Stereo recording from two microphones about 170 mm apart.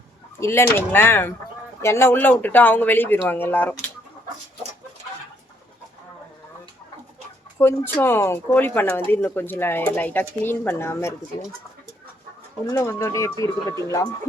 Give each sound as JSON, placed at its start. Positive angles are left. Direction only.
{"t": 0.3, "sound": "speech", "side_deg": 15}
{"t": 7.6, "sound": "speech", "side_deg": 10}
{"t": 12.7, "sound": "speech", "side_deg": 15}